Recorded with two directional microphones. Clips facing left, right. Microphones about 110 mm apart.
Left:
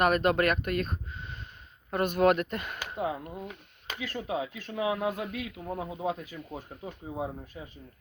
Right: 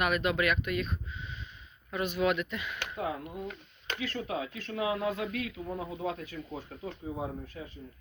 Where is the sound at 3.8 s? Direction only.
10° left (ahead or behind).